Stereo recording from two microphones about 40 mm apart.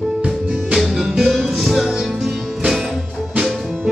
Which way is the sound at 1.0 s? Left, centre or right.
Centre.